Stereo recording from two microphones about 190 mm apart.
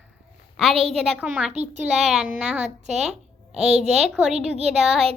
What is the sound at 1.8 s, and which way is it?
Speech, centre (ahead or behind).